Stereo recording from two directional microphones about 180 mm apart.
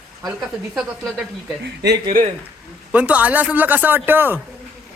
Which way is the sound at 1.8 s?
70° right (ahead or behind).